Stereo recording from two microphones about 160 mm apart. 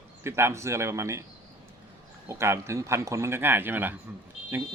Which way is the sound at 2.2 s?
15° right (ahead or behind).